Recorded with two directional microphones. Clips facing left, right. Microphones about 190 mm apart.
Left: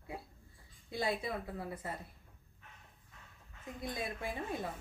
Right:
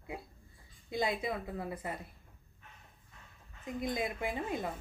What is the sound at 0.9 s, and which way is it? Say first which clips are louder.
A woman's voice: right 2 dB; 20° right (ahead or behind).